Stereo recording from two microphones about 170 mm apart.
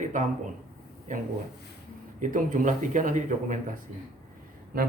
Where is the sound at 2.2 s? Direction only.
50° right (ahead or behind).